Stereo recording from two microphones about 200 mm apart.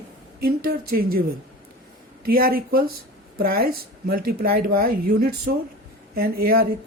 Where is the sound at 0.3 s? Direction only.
50° right (ahead or behind).